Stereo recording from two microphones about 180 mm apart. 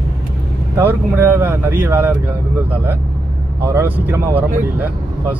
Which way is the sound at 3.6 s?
15° right (ahead or behind).